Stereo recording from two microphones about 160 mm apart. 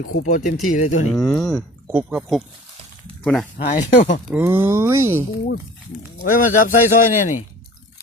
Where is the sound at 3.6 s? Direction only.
70° left (ahead or behind).